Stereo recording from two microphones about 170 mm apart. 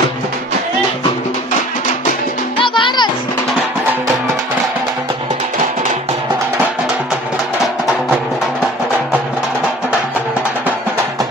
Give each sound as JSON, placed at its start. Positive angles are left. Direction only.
{"t": 2.6, "sound": "music", "side_deg": 30}